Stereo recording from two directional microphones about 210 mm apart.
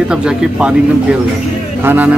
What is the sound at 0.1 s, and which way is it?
Speech, 5° right (ahead or behind).